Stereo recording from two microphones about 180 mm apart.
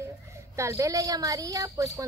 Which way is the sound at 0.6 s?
15° right (ahead or behind).